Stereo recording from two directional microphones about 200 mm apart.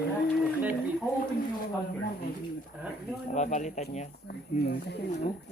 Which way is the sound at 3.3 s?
35° left (ahead or behind).